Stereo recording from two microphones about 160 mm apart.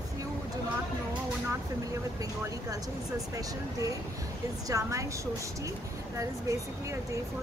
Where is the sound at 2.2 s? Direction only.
20° right (ahead or behind).